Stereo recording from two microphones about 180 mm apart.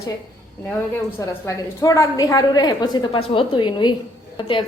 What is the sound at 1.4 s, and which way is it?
A woman's voice, 15° left (ahead or behind).